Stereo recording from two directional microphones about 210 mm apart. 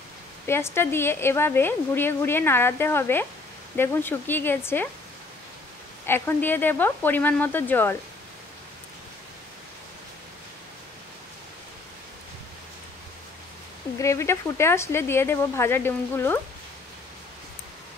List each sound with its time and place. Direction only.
0.5 s a woman's voice: 10° left (ahead or behind)
6.0 s a woman's voice: 10° left (ahead or behind)
13.9 s a woman's voice: 15° left (ahead or behind)